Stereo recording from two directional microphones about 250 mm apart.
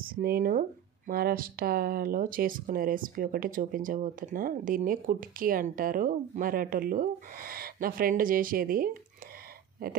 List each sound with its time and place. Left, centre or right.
0.1 s speech: right